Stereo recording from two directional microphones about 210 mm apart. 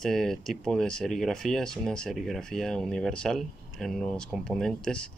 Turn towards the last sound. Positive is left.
turn(degrees=5)  # may be behind; listen again after turning